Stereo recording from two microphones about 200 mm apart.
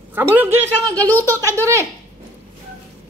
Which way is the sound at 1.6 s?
15° right (ahead or behind).